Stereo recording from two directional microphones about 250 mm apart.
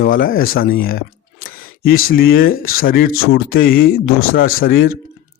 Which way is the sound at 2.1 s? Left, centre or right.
Left.